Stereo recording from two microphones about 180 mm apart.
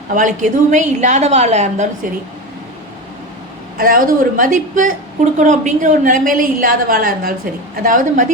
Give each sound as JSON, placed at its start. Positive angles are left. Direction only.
{"t": 0.1, "sound": "a woman's voice", "side_deg": -45}
{"t": 3.8, "sound": "a woman's voice", "side_deg": -55}